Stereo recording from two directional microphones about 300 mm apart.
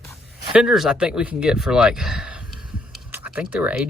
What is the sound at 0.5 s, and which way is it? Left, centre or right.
Speech, centre.